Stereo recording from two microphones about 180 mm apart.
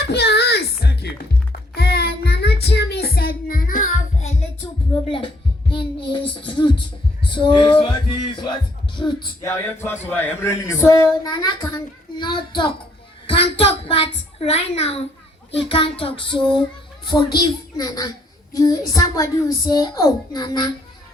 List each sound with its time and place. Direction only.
0.1 s music: 65° left (ahead or behind)
1.7 s child singing: 60° left (ahead or behind); by 4.4 s 40° left (ahead or behind)
5.0 s a sound: 30° left (ahead or behind)
7.2 s music: 25° left (ahead or behind)
9.4 s a child's voice: 15° left (ahead or behind)
18.5 s child singing: 20° left (ahead or behind)
18.9 s a woman's voice: 20° left (ahead or behind)